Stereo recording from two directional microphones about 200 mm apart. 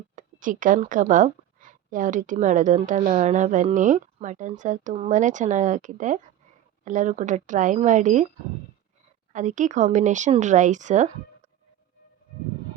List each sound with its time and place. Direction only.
0.2 s speech: 40° right (ahead or behind)
9.3 s speech: 40° right (ahead or behind)